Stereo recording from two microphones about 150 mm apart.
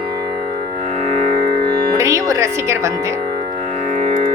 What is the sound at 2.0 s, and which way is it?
Speech, 20° right (ahead or behind).